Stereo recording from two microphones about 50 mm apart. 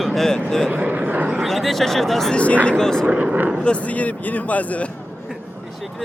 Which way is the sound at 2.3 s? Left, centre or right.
Left.